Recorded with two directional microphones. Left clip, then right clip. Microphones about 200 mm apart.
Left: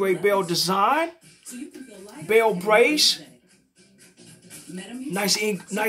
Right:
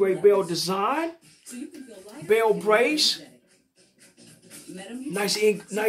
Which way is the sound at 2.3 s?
15° left (ahead or behind).